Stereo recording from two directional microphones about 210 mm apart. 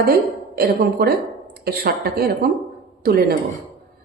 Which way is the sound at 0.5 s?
50° right (ahead or behind).